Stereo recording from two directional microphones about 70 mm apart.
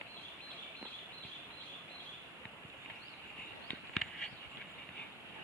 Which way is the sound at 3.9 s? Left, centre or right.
Centre.